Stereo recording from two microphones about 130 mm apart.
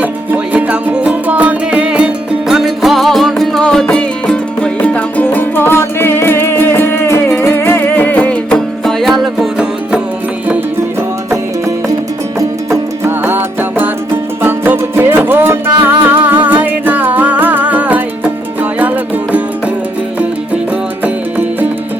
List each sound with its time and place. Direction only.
0.0 s music: 10° right (ahead or behind)
12.4 s music: 20° right (ahead or behind)
21.0 s music: 15° right (ahead or behind)